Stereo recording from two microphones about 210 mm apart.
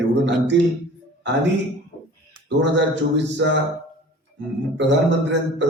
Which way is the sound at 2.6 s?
55° right (ahead or behind).